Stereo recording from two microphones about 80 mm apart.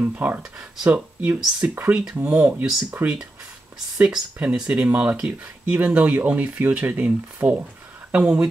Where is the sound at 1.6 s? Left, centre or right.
Centre.